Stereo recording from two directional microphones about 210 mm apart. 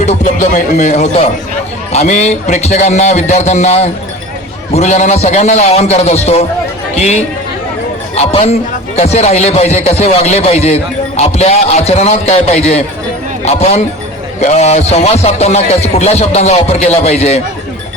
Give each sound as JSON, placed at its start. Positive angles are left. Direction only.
{"t": 0.0, "sound": "speech", "side_deg": 35}